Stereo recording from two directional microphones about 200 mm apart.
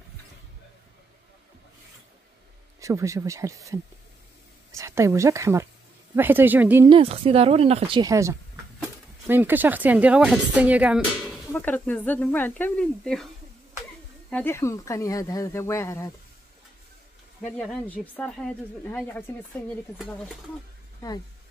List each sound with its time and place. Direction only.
2.8 s speech: 15° right (ahead or behind)
6.9 s speech: 30° right (ahead or behind); by 11.3 s 5° right (ahead or behind)
11.5 s speech: 10° left (ahead or behind)
14.3 s speech: 10° left (ahead or behind)
17.6 s speech: 5° left (ahead or behind)